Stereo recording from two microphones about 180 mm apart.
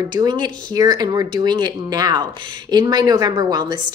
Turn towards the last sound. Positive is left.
turn(degrees=-20)  # may be behind; listen again after turning